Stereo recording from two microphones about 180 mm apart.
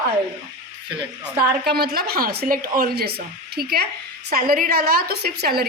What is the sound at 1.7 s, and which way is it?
Speech, 60° right (ahead or behind).